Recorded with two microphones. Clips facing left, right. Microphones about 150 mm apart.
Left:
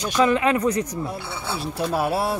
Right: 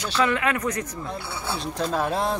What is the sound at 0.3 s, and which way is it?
Speech, 25° left (ahead or behind).